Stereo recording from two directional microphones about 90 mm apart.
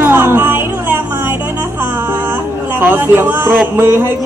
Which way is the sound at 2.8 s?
25° right (ahead or behind).